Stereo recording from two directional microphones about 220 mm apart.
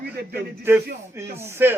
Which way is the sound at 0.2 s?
50° right (ahead or behind).